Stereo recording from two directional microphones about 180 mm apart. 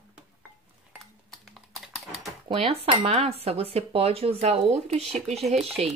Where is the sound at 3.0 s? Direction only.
35° right (ahead or behind).